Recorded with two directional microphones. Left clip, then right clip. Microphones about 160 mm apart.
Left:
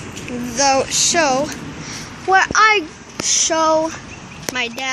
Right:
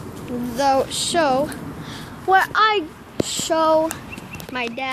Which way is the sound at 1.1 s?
Centre (ahead or behind).